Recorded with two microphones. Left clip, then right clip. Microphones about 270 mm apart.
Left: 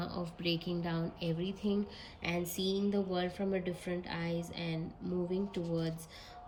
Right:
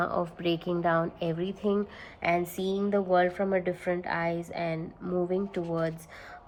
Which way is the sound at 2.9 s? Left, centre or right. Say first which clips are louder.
Right 11 dB; centre.